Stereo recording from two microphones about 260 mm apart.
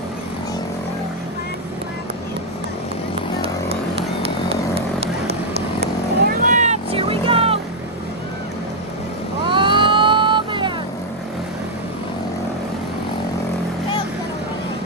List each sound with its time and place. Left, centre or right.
4.7 s vehicle: right
9.5 s vehicle: centre